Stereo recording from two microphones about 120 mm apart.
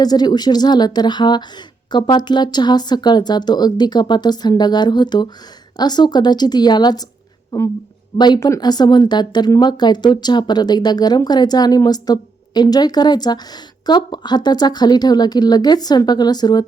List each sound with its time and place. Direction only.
0.0 s speech: 35° left (ahead or behind)